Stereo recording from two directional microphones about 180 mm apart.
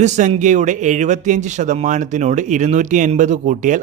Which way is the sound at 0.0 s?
40° right (ahead or behind).